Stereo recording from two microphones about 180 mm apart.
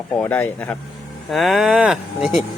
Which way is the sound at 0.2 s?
10° left (ahead or behind).